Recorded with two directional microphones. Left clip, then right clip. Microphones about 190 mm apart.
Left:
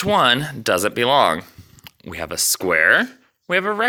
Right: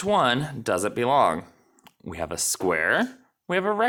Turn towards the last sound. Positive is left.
turn(degrees=0)  # may be behind; listen again after turning